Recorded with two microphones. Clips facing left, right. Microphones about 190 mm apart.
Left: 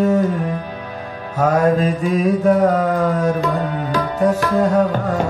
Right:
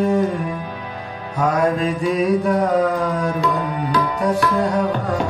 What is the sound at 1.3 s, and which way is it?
Mantra, 40° left (ahead or behind).